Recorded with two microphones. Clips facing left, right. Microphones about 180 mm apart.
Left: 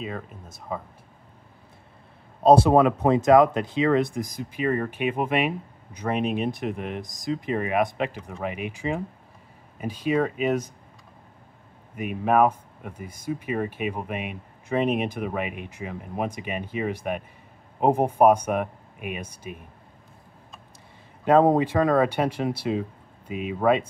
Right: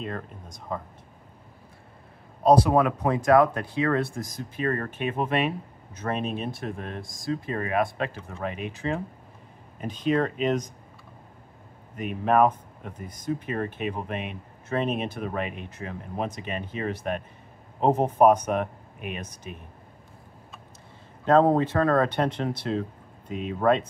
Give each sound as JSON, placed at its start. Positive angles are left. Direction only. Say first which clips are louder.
{"t": 0.0, "sound": "speech", "louder": "even", "side_deg": 5}
{"t": 2.4, "sound": "speech", "louder": "left 3 dB", "side_deg": 25}
{"t": 11.9, "sound": "speech", "louder": "left 1 dB", "side_deg": 10}
{"t": 21.3, "sound": "speech", "louder": "left 1 dB", "side_deg": 15}